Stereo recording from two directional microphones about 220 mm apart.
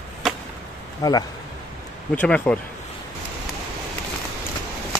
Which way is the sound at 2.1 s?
5° left (ahead or behind).